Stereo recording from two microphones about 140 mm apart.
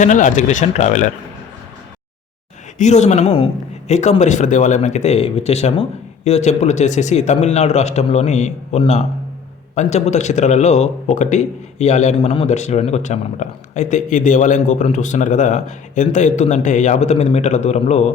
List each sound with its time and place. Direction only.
0.0 s speech: 65° left (ahead or behind)
2.7 s a woman's voice: 55° left (ahead or behind)